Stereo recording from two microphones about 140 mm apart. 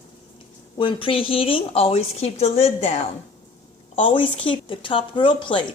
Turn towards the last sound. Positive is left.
turn(degrees=35)  # may be behind; listen again after turning